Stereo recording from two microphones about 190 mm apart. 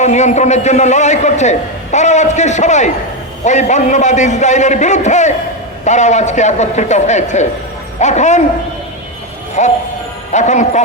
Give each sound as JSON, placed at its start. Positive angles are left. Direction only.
{"t": 0.0, "sound": "a man's voice", "side_deg": 40}
{"t": 9.6, "sound": "a man's voice", "side_deg": 40}